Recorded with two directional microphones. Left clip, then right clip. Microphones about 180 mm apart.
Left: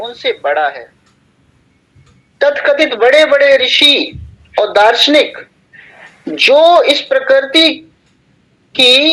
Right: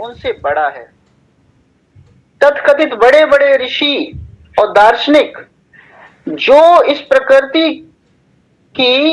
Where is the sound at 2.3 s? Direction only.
15° left (ahead or behind).